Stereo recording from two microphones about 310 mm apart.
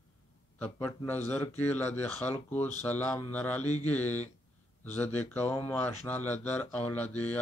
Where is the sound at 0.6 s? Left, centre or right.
Centre.